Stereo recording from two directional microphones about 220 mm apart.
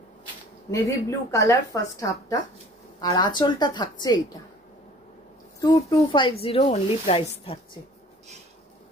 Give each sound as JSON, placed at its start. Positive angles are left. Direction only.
{"t": 0.7, "sound": "a woman's voice", "side_deg": 15}
{"t": 5.6, "sound": "a woman's voice", "side_deg": 20}